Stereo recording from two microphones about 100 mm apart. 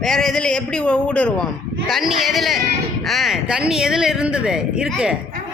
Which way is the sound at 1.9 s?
Centre (ahead or behind).